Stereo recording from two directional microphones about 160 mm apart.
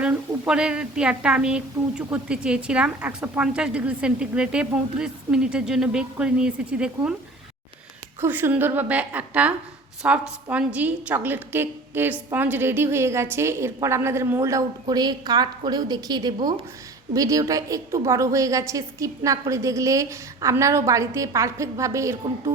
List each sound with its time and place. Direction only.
0.0 s a woman's voice: 5° right (ahead or behind)
8.2 s a woman's voice: 15° right (ahead or behind)